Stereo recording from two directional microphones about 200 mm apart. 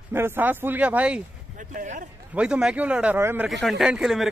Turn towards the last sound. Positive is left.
turn(degrees=0)  # may be behind; listen again after turning